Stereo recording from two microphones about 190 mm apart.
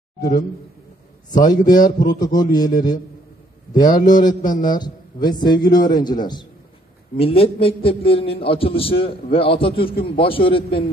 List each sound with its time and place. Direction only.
0.2 s a man's voice: 45° left (ahead or behind)
1.3 s a man's voice: 20° left (ahead or behind)
3.7 s a man's voice: 20° left (ahead or behind)
4.3 s a man's voice: 45° left (ahead or behind)
4.6 s a man's voice: 20° left (ahead or behind)
7.2 s a man's voice: 30° left (ahead or behind)